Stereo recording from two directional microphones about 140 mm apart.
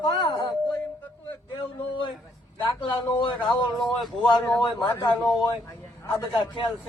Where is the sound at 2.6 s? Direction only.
35° left (ahead or behind).